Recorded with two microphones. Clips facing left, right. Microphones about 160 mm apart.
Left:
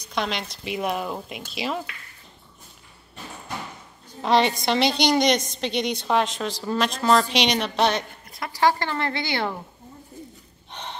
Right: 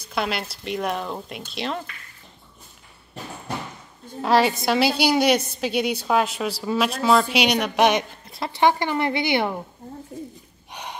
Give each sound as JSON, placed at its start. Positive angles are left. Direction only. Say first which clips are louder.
{"t": 0.0, "sound": "speech", "louder": "right 1 dB", "side_deg": -5}
{"t": 4.2, "sound": "a woman's voice", "louder": "right 1 dB", "side_deg": -5}
{"t": 8.3, "sound": "speech", "louder": "right 2 dB", "side_deg": -25}
{"t": 10.7, "sound": "gasp", "louder": "right 1 dB", "side_deg": -10}